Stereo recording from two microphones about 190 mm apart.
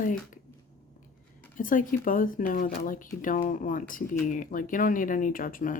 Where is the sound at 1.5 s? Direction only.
45° left (ahead or behind).